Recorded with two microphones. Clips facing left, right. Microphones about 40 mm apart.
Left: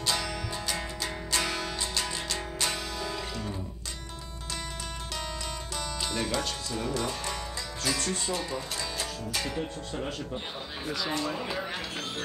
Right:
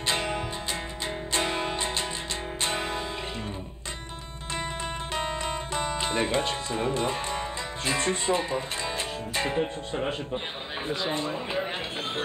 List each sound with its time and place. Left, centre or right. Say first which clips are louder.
0.0 s music: right 3 dB; right
5.8 s speech: right 5 dB; right